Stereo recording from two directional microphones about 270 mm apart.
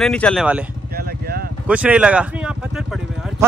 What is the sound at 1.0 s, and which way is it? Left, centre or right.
Vehicle, right.